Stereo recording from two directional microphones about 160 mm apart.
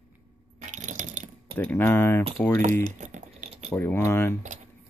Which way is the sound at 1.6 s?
10° left (ahead or behind).